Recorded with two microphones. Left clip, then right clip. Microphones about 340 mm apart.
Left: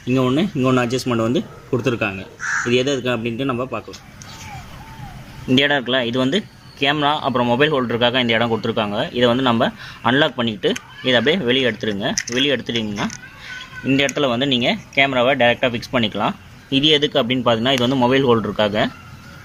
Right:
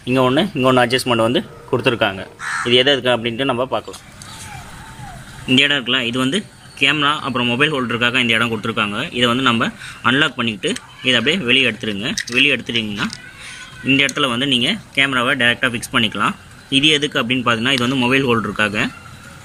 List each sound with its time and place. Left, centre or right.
0.1 s a man's voice: centre
5.5 s speech: centre